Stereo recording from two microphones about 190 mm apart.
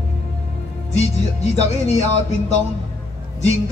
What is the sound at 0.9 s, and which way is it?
Music, 35° left (ahead or behind).